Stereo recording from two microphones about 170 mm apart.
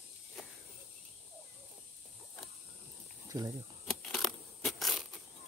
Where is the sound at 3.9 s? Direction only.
Centre (ahead or behind).